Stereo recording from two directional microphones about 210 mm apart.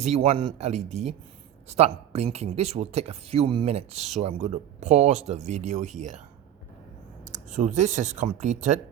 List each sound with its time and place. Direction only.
0.0 s speech: 30° right (ahead or behind)
7.3 s speech: 35° right (ahead or behind)